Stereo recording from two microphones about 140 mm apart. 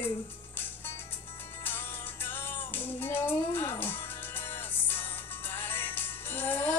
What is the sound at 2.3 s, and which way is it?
Music, 15° left (ahead or behind).